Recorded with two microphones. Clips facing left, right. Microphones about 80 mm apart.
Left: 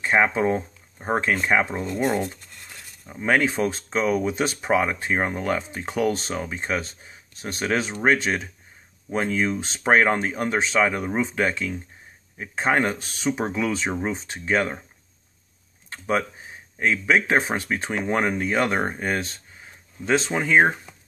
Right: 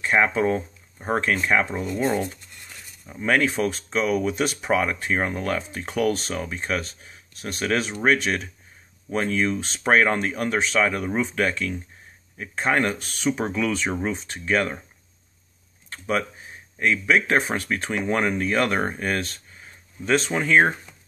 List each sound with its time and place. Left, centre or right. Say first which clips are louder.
0.0 s speech: even; left
3.1 s speech: even; left
15.9 s speech: left 1 dB; left